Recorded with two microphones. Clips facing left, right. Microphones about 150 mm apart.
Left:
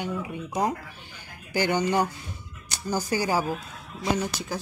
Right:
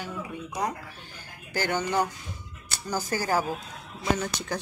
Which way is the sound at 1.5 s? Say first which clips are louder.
Left 3 dB; 10° left (ahead or behind).